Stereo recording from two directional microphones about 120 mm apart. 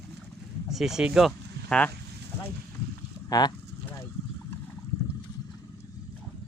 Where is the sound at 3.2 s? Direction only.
30° left (ahead or behind).